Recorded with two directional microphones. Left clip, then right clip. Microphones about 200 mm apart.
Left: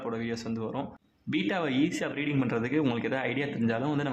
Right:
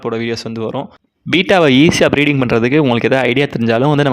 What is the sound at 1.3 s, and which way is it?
Speech, 55° right (ahead or behind).